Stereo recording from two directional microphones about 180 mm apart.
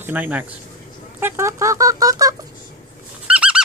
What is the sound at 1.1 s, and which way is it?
Speech, 15° right (ahead or behind).